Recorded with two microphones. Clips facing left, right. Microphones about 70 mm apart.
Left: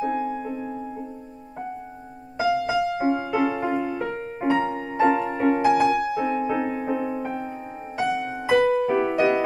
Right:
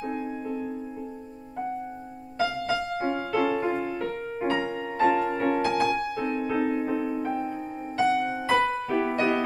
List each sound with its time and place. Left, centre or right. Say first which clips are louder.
0.0 s music: left 6 dB; centre
2.3 s music: left 5 dB; centre
5.4 s music: left 5 dB; left
8.1 s music: right 1 dB; centre
8.5 s music: left 7 dB; centre